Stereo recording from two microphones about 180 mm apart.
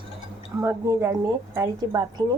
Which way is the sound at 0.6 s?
15° right (ahead or behind).